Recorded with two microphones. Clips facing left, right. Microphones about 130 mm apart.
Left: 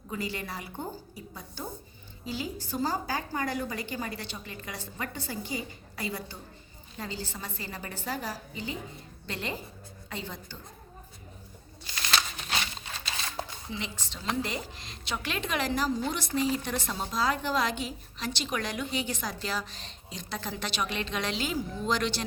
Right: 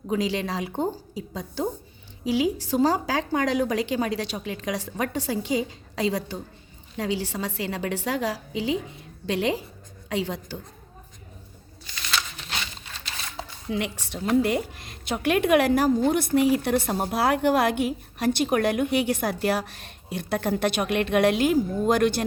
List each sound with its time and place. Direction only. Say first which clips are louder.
0.1 s a woman's voice: right 9 dB; 85° right
6.9 s a woman's voice: right 10 dB; 75° right (ahead or behind)
13.7 s a woman's voice: right 9 dB; 70° right (ahead or behind)